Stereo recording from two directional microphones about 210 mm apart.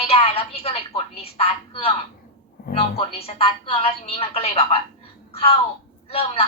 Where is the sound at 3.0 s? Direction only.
30° left (ahead or behind).